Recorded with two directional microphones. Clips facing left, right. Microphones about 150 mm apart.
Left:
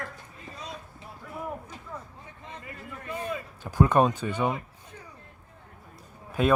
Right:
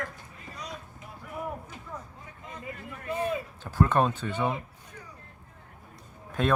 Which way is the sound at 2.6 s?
20° right (ahead or behind).